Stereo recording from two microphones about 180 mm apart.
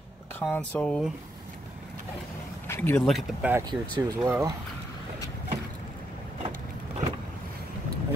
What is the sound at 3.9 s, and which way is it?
Speech, 15° right (ahead or behind).